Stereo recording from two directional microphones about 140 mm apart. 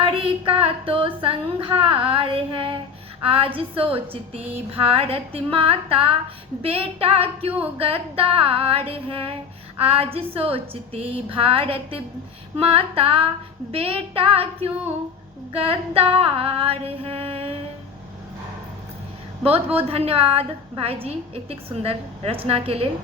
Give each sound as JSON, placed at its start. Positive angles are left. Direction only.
{"t": 0.0, "sound": "child singing", "side_deg": -40}
{"t": 3.3, "sound": "a woman's voice", "side_deg": -40}
{"t": 4.5, "sound": "female singing", "side_deg": -45}
{"t": 9.8, "sound": "a woman's voice", "side_deg": -40}
{"t": 13.7, "sound": "female singing", "side_deg": -45}
{"t": 19.9, "sound": "female singing", "side_deg": -45}